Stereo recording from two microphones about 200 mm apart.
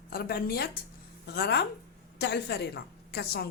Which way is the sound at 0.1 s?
50° left (ahead or behind).